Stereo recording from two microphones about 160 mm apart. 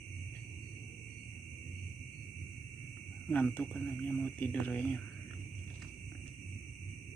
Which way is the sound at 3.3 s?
10° left (ahead or behind).